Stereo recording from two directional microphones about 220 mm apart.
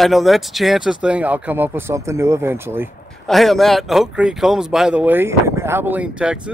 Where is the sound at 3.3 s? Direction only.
Centre (ahead or behind).